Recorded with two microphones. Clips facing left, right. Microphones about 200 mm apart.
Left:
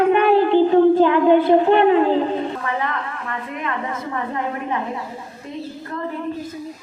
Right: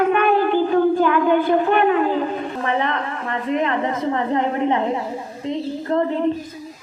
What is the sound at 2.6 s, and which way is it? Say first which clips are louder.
A woman's voice: right 3 dB; 25° right (ahead or behind).